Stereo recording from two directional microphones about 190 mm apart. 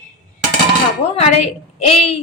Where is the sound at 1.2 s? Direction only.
35° left (ahead or behind).